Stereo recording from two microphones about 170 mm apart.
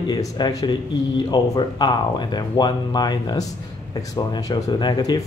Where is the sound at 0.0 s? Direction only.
20° left (ahead or behind).